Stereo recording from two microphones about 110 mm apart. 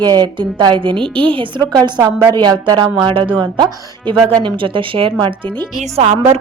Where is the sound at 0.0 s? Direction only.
40° right (ahead or behind).